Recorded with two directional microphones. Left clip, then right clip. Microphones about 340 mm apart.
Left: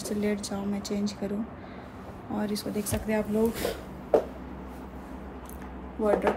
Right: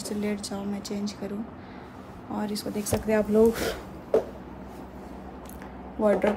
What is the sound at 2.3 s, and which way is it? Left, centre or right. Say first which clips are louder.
Speech: even; centre.